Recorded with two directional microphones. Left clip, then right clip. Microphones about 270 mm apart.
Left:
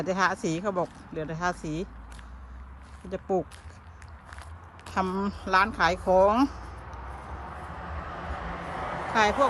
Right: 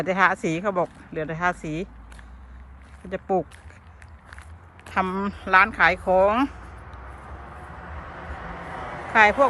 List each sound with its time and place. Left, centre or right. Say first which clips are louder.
0.0 s speech: right 5 dB; centre
3.1 s speech: right 4 dB; centre
4.9 s speech: right 4 dB; centre
7.5 s vehicle: even; centre